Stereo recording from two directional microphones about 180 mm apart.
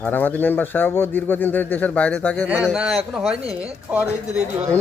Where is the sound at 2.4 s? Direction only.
5° right (ahead or behind).